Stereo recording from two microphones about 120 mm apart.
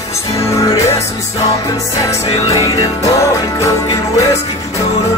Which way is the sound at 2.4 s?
30° left (ahead or behind).